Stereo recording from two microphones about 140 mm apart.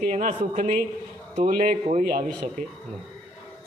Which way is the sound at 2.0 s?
90° right.